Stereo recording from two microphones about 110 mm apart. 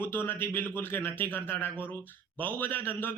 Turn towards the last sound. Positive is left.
turn(degrees=20)  # may be behind; listen again after turning